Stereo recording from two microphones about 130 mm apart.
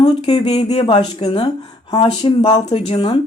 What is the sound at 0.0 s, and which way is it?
A woman's voice, 50° left (ahead or behind).